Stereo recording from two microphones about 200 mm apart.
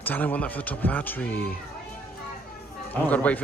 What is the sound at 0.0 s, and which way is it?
Speech, 10° left (ahead or behind).